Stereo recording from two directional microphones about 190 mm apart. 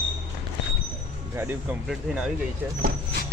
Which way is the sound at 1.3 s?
10° right (ahead or behind).